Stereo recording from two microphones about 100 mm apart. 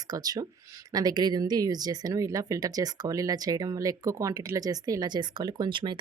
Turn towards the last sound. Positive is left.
turn(degrees=-50)  # may be behind; listen again after turning